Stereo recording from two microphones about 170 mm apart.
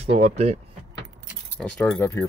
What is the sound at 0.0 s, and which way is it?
Speech, 40° right (ahead or behind).